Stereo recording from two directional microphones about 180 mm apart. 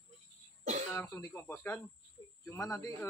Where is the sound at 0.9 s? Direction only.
15° left (ahead or behind).